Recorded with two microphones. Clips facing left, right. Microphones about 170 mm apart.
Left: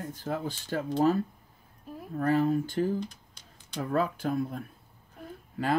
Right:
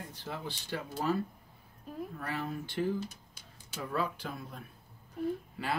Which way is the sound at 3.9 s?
50° left (ahead or behind).